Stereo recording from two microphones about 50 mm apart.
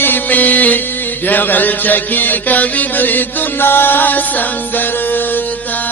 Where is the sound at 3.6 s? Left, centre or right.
Left.